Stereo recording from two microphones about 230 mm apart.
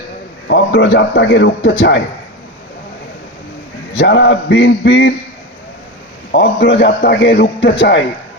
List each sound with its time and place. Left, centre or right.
0.4 s a man's voice: left
3.9 s a man's voice: left
6.3 s a man's voice: left